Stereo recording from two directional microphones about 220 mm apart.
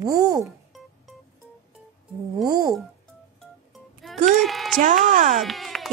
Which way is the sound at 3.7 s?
Centre (ahead or behind).